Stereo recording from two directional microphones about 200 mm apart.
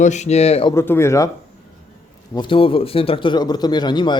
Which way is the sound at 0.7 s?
10° left (ahead or behind).